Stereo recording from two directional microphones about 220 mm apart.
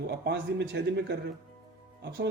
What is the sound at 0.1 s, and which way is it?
Speech, 50° right (ahead or behind).